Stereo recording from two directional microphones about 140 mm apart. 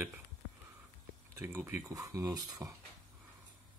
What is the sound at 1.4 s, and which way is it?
Speech, 15° right (ahead or behind).